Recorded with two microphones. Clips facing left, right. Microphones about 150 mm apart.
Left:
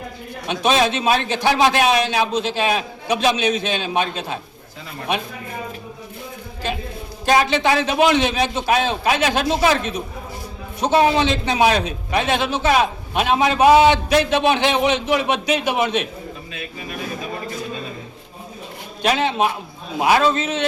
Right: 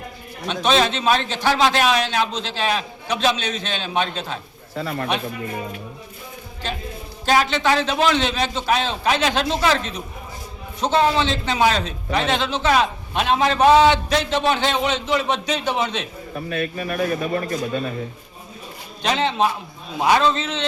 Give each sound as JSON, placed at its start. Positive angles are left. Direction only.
{"t": 0.4, "sound": "a man's voice", "side_deg": 10}
{"t": 4.8, "sound": "speech", "side_deg": -65}
{"t": 7.3, "sound": "a man's voice", "side_deg": 15}
{"t": 16.5, "sound": "speech", "side_deg": -60}
{"t": 19.0, "sound": "a man's voice", "side_deg": 10}